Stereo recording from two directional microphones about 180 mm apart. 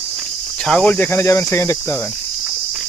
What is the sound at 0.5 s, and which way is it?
Speech, 5° left (ahead or behind).